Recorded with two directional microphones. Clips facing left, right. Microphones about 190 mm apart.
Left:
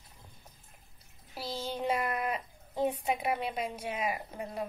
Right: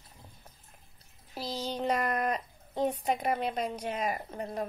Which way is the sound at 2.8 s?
5° left (ahead or behind).